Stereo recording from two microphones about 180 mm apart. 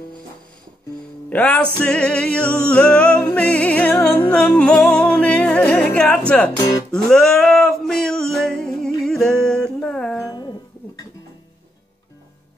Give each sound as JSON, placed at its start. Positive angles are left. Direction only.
{"t": 1.3, "sound": "music", "side_deg": 10}
{"t": 6.9, "sound": "male singing", "side_deg": 5}
{"t": 10.2, "sound": "music", "side_deg": 20}